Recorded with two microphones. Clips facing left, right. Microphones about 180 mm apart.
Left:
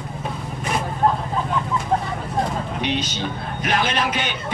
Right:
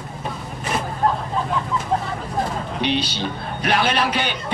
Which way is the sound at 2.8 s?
35° right (ahead or behind).